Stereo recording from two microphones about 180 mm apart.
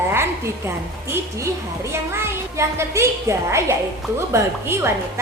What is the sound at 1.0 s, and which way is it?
A woman's voice, 15° right (ahead or behind).